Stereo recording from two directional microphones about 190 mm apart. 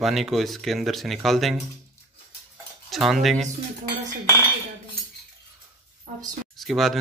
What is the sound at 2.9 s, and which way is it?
Speech, centre (ahead or behind).